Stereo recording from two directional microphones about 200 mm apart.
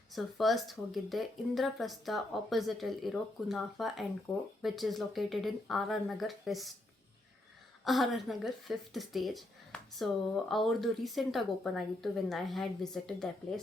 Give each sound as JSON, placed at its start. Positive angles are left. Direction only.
{"t": 0.1, "sound": "speech", "side_deg": 0}
{"t": 7.9, "sound": "speech", "side_deg": 0}